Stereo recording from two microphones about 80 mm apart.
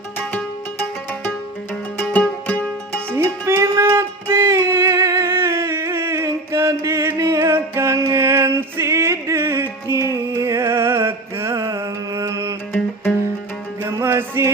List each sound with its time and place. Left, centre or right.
0.2 s music: left
3.2 s music: right
13.8 s music: right